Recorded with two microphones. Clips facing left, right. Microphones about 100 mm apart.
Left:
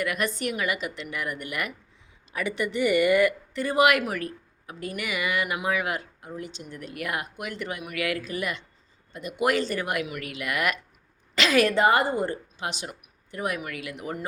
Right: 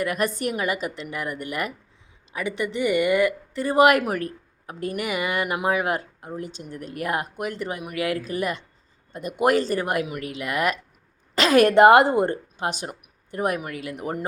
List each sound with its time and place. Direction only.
0.0 s speech: 40° right (ahead or behind)
11.3 s a woman's voice: 45° right (ahead or behind)
11.7 s speech: 65° right (ahead or behind); by 14.3 s 45° right (ahead or behind)